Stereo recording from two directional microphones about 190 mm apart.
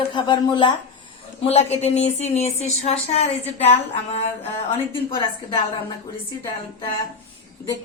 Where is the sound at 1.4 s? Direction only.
35° left (ahead or behind).